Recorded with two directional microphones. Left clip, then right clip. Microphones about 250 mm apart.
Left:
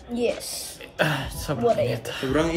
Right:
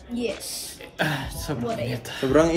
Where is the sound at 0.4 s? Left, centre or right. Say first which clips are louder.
Left 1 dB; left.